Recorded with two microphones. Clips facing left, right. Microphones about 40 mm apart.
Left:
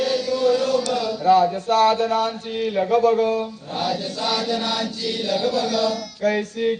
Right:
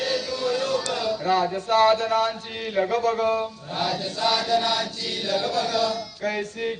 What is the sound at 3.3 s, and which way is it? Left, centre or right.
Mantra, centre.